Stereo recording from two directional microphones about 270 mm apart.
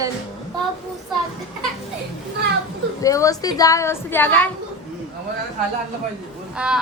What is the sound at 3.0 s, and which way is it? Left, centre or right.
A woman's voice, centre.